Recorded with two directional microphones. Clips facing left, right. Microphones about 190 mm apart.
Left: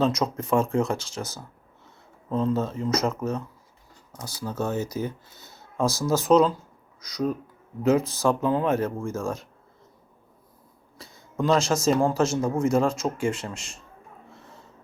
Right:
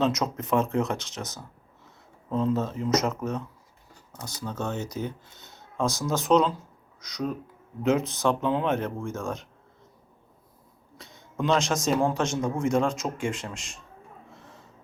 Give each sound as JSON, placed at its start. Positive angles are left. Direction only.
{"t": 0.0, "sound": "speech", "side_deg": 0}
{"t": 2.6, "sound": "speech", "side_deg": 0}
{"t": 4.4, "sound": "speech", "side_deg": 5}
{"t": 10.9, "sound": "speech", "side_deg": 0}
{"t": 14.3, "sound": "a sound", "side_deg": 0}